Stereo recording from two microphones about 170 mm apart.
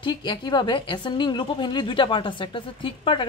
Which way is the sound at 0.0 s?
25° left (ahead or behind).